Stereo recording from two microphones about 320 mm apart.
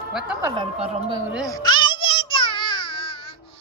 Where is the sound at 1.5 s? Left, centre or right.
Centre.